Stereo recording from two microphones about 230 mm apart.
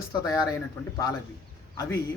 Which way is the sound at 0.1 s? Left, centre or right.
Centre.